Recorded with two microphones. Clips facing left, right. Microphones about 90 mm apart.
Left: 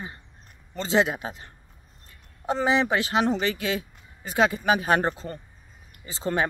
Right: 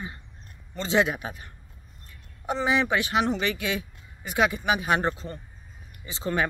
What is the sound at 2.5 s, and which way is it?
Speech, 30° left (ahead or behind).